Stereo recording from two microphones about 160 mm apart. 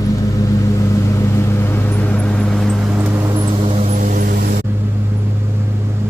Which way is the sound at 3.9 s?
55° right (ahead or behind).